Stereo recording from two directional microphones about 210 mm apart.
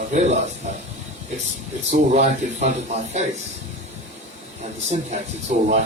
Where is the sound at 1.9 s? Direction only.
35° right (ahead or behind).